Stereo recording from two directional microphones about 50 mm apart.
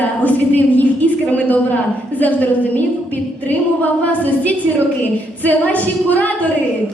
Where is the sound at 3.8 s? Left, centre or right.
Left.